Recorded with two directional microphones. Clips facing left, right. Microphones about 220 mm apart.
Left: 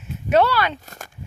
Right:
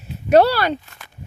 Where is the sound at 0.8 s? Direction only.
45° left (ahead or behind).